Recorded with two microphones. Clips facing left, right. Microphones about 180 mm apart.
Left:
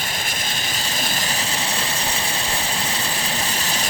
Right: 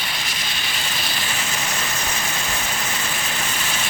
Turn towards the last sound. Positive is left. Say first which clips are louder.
# left 2 dB
turn(degrees=35)  # may be behind; listen again after turning